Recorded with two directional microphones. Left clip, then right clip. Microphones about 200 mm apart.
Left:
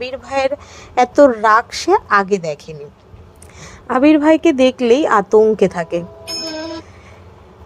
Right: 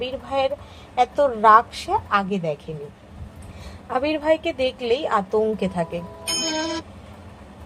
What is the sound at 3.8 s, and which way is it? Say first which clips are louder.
Speech: left 9 dB; 50° left (ahead or behind).